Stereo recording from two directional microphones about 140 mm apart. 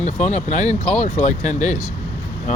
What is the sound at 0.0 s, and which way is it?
Speech, 55° left (ahead or behind).